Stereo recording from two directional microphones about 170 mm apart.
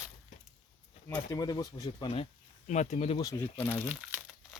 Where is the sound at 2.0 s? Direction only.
35° left (ahead or behind).